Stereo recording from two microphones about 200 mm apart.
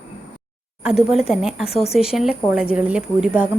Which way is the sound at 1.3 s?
Centre (ahead or behind).